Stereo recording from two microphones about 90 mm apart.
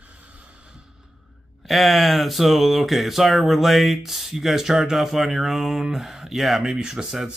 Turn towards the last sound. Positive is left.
turn(degrees=-5)  # may be behind; listen again after turning